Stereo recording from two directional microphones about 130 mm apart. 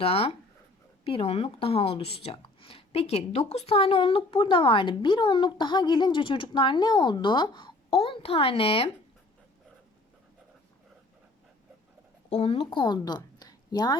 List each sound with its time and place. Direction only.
0.0 s speech: 50° left (ahead or behind)
12.4 s a woman's voice: 45° left (ahead or behind)